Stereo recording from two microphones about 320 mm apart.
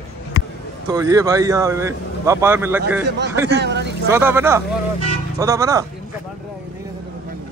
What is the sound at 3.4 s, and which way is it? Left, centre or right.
Speech, right.